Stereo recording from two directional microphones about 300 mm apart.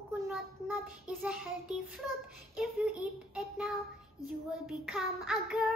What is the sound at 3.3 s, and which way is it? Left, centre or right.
Child singing, centre.